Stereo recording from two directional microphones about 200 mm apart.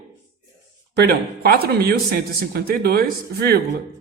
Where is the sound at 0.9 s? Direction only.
50° right (ahead or behind).